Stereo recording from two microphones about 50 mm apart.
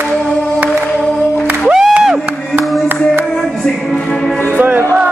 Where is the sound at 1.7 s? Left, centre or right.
Centre.